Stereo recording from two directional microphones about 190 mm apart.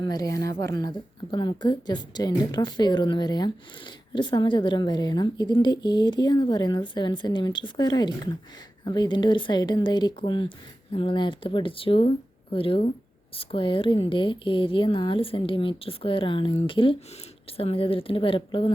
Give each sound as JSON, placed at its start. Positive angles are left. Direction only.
{"t": 0.0, "sound": "a woman's voice", "side_deg": 20}